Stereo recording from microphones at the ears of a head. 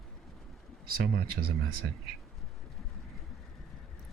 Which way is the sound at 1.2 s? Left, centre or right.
Right.